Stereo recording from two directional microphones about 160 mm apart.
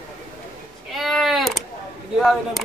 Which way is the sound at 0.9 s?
Centre (ahead or behind).